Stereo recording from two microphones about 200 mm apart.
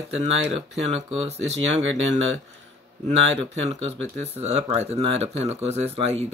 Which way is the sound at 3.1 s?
30° right (ahead or behind).